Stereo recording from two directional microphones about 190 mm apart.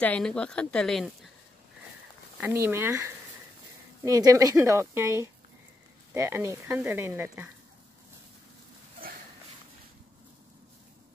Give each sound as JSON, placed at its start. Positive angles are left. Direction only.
{"t": 0.0, "sound": "speech", "side_deg": 5}
{"t": 2.4, "sound": "speech", "side_deg": -15}